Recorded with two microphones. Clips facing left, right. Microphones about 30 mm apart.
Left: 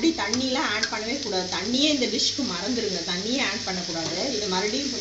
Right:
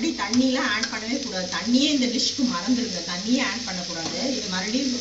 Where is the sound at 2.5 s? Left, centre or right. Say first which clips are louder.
Right 2 dB; centre.